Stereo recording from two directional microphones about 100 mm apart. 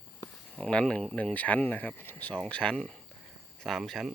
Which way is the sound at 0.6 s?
10° left (ahead or behind).